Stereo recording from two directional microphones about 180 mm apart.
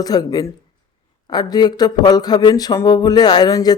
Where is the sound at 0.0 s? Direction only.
20° left (ahead or behind).